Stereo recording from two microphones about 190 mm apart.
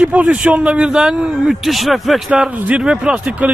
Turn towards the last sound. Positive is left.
turn(degrees=-10)  # may be behind; listen again after turning